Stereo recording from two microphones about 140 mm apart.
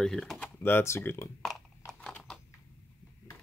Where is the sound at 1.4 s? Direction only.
5° left (ahead or behind).